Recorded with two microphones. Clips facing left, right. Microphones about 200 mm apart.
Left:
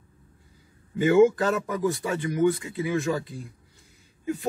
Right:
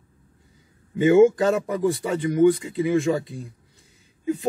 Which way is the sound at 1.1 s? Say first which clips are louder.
Right 3 dB; 15° right (ahead or behind).